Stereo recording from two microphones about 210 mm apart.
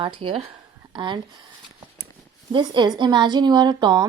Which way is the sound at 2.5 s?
20° right (ahead or behind).